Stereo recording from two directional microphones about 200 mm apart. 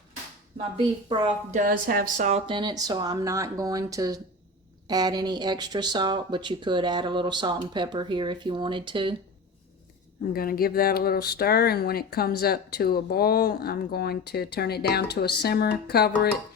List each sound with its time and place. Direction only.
1.0 s a woman's voice: 30° right (ahead or behind)
2.5 s speech: 20° right (ahead or behind)
10.3 s speech: 45° left (ahead or behind)